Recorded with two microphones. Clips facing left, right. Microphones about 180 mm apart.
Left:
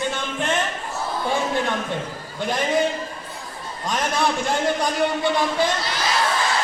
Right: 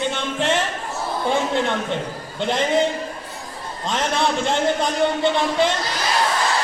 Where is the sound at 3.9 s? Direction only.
25° right (ahead or behind).